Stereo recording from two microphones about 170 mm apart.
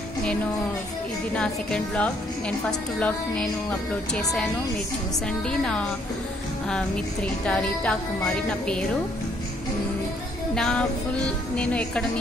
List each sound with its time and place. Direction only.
1.3 s speech: 5° left (ahead or behind)
4.1 s speech: centre (ahead or behind)
5.5 s speech: 5° left (ahead or behind)
10.5 s speech: 5° left (ahead or behind)